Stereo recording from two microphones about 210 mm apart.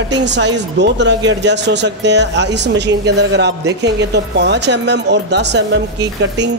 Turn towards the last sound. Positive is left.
turn(degrees=-55)  # may be behind; listen again after turning